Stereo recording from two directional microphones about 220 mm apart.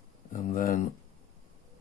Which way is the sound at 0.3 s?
35° left (ahead or behind).